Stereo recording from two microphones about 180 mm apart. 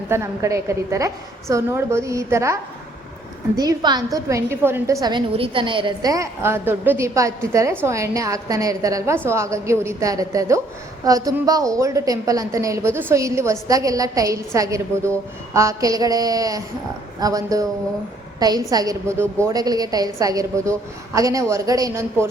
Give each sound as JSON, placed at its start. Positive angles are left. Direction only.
{"t": 0.1, "sound": "a woman's voice", "side_deg": -15}
{"t": 3.6, "sound": "a woman's voice", "side_deg": -20}